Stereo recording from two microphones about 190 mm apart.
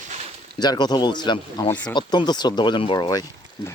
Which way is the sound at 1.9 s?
25° left (ahead or behind).